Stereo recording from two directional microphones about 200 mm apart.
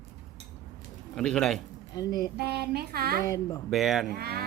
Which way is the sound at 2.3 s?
55° right (ahead or behind).